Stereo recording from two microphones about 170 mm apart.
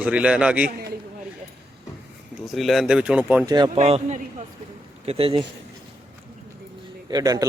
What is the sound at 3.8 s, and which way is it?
A man's voice, 40° right (ahead or behind).